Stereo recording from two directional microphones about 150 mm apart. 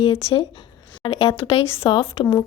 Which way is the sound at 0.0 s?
40° left (ahead or behind).